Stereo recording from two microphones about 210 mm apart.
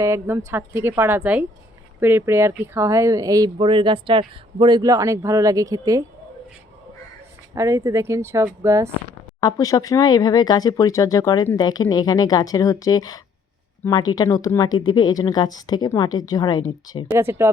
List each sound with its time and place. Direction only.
0.0 s speech: 10° right (ahead or behind)
7.5 s speech: 15° right (ahead or behind)
9.4 s speech: 15° left (ahead or behind)
17.1 s speech: 10° right (ahead or behind)